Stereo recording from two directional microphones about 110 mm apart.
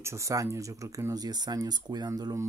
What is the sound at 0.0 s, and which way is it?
Speech, 25° right (ahead or behind).